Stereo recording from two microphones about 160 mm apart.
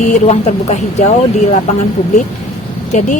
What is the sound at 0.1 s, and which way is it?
Speech, 45° left (ahead or behind).